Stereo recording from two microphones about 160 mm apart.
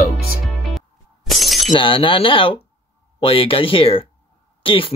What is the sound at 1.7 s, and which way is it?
Speech, 35° left (ahead or behind).